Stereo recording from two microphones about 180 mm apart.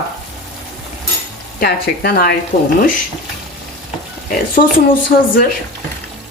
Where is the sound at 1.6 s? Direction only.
55° left (ahead or behind).